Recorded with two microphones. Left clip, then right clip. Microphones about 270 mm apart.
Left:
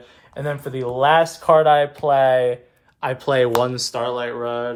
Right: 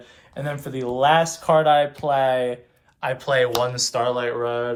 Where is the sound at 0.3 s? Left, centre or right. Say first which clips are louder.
Left 3 dB; left.